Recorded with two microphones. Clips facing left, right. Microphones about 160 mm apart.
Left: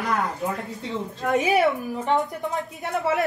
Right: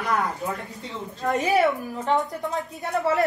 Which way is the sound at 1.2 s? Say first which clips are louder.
Even; 5° left (ahead or behind).